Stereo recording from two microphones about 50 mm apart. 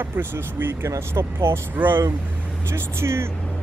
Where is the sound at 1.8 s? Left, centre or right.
Right.